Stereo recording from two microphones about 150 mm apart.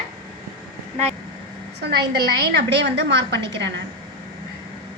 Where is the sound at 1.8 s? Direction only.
90° right.